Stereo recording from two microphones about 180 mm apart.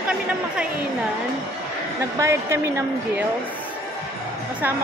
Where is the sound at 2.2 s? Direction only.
15° right (ahead or behind).